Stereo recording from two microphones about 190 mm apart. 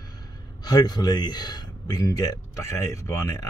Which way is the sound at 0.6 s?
20° left (ahead or behind).